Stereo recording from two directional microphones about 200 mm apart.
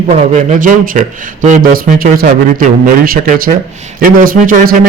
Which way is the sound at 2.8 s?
45° right (ahead or behind).